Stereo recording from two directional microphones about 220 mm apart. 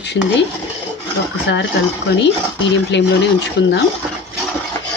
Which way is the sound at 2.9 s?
50° left (ahead or behind).